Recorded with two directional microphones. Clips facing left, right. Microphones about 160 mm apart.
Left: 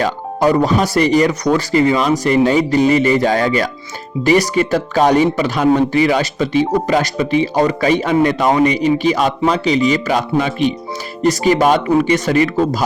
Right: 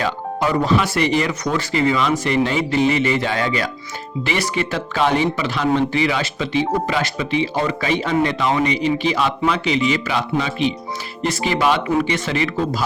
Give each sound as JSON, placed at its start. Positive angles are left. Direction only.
{"t": 0.0, "sound": "speech", "side_deg": 40}